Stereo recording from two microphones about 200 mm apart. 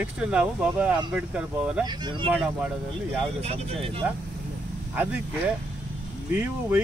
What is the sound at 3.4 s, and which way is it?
Speech, 30° right (ahead or behind).